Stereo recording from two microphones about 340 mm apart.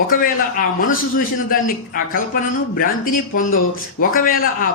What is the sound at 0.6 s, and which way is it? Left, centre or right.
Speech, left.